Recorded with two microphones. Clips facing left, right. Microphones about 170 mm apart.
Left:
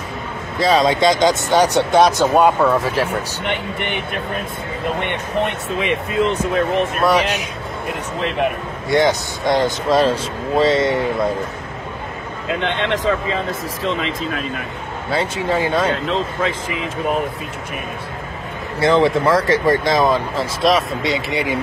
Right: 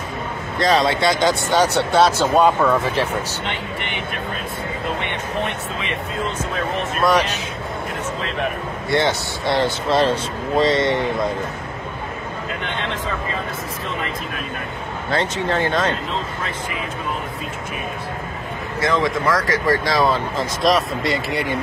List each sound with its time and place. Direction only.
0.6 s speech: 10° left (ahead or behind)
3.4 s speech: 55° left (ahead or behind)
6.1 s speech: 60° left (ahead or behind)
7.0 s speech: 10° left (ahead or behind)
8.9 s speech: 15° left (ahead or behind)
12.6 s speech: 90° left
15.0 s speech: 10° left (ahead or behind)
18.8 s speech: 30° left (ahead or behind)
20.6 s speech: centre (ahead or behind)